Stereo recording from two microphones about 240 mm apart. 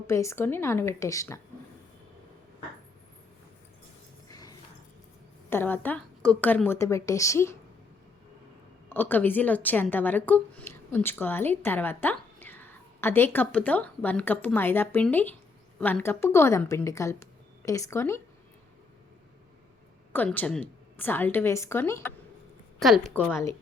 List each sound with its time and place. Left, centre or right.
0.1 s a woman's voice: centre
4.3 s a sound: centre
5.5 s a woman's voice: centre
8.9 s a woman's voice: centre
20.1 s a woman's voice: centre